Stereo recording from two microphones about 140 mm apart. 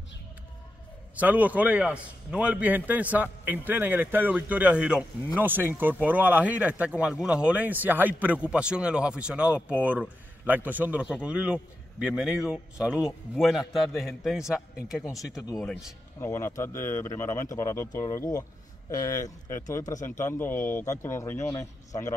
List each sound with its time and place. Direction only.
1.1 s a man's voice: 10° right (ahead or behind)
16.2 s a man's voice: 20° left (ahead or behind)